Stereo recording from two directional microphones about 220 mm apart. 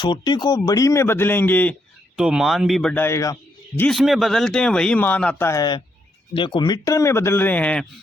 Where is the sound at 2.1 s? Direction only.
5° right (ahead or behind); by 3.3 s 15° left (ahead or behind).